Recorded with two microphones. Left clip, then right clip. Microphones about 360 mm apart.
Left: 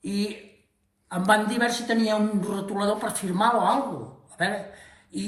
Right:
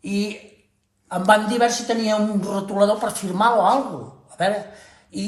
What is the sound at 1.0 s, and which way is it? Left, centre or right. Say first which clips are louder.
A man's voice: right 5 dB; centre.